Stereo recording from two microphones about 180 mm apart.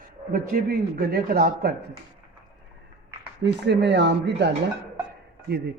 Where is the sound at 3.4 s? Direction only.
70° right (ahead or behind).